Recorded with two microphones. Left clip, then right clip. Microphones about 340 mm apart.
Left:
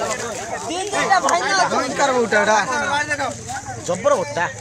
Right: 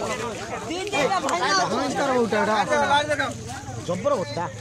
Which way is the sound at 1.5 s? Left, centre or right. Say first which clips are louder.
Left 4 dB; left.